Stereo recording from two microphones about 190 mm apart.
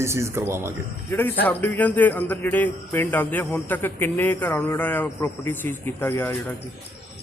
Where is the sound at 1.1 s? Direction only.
10° left (ahead or behind).